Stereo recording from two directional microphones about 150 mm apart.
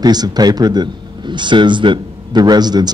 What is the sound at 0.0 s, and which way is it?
A man's voice, 25° right (ahead or behind).